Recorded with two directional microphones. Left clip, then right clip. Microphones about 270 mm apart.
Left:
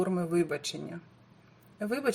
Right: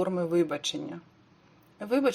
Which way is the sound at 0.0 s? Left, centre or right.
Centre.